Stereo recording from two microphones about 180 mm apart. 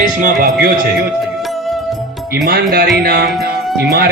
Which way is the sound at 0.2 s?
50° right (ahead or behind).